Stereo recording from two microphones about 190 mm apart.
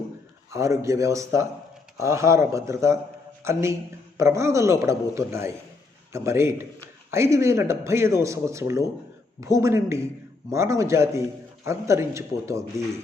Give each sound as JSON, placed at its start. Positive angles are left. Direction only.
{"t": 0.5, "sound": "a man's voice", "side_deg": -15}